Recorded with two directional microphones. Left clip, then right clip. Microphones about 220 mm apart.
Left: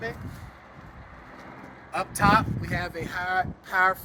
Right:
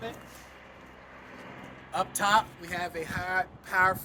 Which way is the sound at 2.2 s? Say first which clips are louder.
Left 4 dB; 10° right (ahead or behind).